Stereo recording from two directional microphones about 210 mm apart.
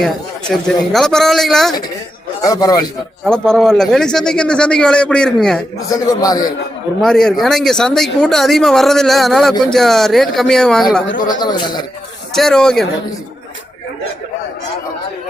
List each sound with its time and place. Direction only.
0.0 s speech: centre (ahead or behind)
2.4 s a man's voice: 15° left (ahead or behind)
3.2 s speech: 5° left (ahead or behind)
5.9 s a man's voice: 15° left (ahead or behind)
7.0 s speech: centre (ahead or behind)
11.3 s a man's voice: 20° left (ahead or behind)
12.3 s speech: centre (ahead or behind)